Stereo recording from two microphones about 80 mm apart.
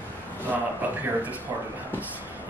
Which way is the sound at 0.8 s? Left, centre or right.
Right.